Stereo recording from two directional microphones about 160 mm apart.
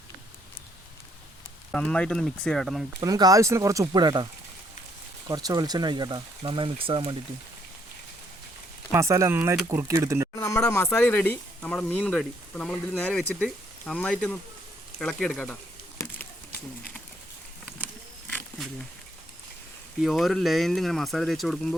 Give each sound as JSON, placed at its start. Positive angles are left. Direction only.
{"t": 1.7, "sound": "speech", "side_deg": 5}
{"t": 3.0, "sound": "speech", "side_deg": -20}
{"t": 5.3, "sound": "speech", "side_deg": -25}
{"t": 8.9, "sound": "speech", "side_deg": -15}
{"t": 10.3, "sound": "speech", "side_deg": 20}
{"t": 16.0, "sound": "a sound", "side_deg": 10}
{"t": 20.0, "sound": "speech", "side_deg": 0}